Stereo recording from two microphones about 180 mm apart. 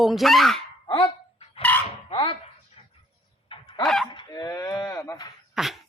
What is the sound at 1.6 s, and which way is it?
Chicken, 10° left (ahead or behind).